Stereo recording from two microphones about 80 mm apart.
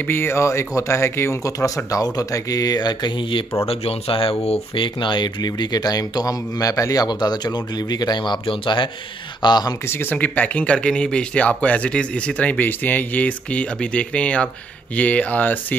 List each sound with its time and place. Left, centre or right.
0.0 s speech: left
1.9 s speech: left
4.7 s speech: left
9.4 s speech: left
9.8 s speech: left